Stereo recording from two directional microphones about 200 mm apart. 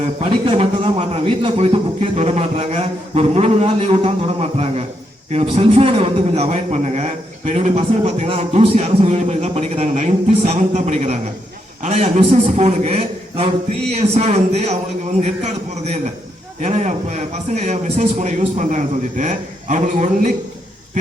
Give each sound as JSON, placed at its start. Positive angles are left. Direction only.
{"t": 0.0, "sound": "a man's voice", "side_deg": -30}